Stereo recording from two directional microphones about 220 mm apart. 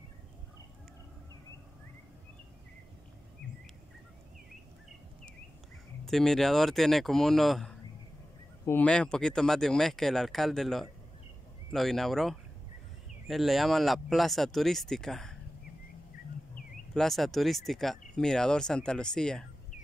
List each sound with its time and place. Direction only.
6.0 s speech: centre (ahead or behind)
16.9 s speech: centre (ahead or behind)